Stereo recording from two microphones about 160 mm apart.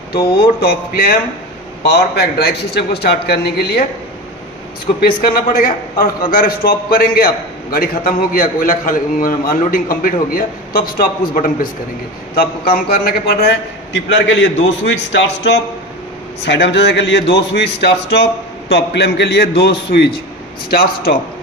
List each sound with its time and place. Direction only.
0.2 s speech: 35° left (ahead or behind)
0.6 s a man's voice: 70° left (ahead or behind)
1.8 s a man's voice: 85° left
5.0 s a man's voice: 65° left (ahead or behind)
12.4 s a man's voice: 70° left (ahead or behind); by 14.1 s 90° left
16.4 s a man's voice: 90° left
20.7 s a man's voice: 70° left (ahead or behind)